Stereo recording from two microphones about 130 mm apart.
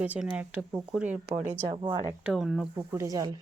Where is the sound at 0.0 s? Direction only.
10° right (ahead or behind).